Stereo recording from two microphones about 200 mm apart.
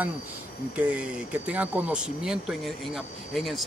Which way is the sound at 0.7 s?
5° right (ahead or behind).